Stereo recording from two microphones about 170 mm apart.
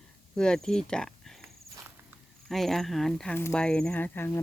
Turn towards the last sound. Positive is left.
turn(degrees=10)  # may be behind; listen again after turning